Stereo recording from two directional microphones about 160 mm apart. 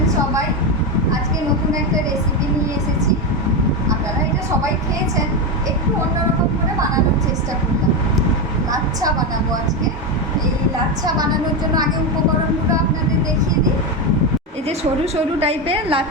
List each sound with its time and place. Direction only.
8.7 s vehicle: 25° right (ahead or behind)
14.7 s a woman's voice: 40° right (ahead or behind)